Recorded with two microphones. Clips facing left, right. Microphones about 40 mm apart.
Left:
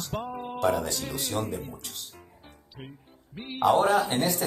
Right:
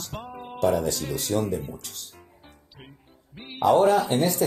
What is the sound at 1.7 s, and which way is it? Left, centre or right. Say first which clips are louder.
Music: even; centre.